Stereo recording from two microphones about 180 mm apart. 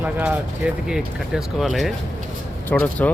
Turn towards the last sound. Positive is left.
turn(degrees=10)  # may be behind; listen again after turning